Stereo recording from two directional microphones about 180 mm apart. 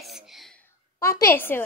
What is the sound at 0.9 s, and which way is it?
Speech, 15° left (ahead or behind).